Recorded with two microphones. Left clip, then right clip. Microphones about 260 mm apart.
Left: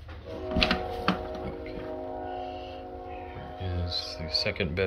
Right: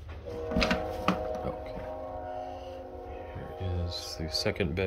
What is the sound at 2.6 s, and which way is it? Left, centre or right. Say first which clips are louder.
Music: left 2 dB; right.